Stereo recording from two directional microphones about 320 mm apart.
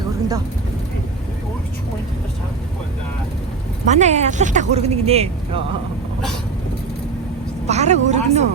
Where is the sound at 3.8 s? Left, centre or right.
Right.